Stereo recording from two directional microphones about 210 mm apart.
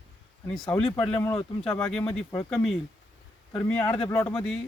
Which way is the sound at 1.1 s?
15° left (ahead or behind).